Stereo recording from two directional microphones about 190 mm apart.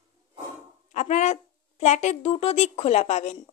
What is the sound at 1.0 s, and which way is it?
Speech, 35° left (ahead or behind).